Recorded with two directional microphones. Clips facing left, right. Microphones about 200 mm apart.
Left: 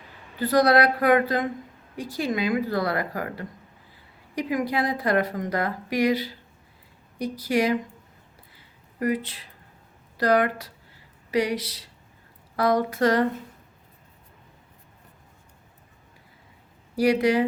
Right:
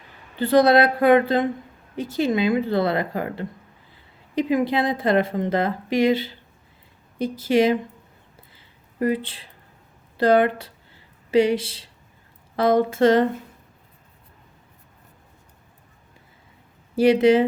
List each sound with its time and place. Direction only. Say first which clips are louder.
0.3 s a woman's voice: right 4 dB; 25° right (ahead or behind)
8.5 s a sound: right 6 dB; 30° right (ahead or behind)
10.2 s a woman's voice: right 4 dB; 25° right (ahead or behind)
16.9 s a woman's voice: right 5 dB; 25° right (ahead or behind)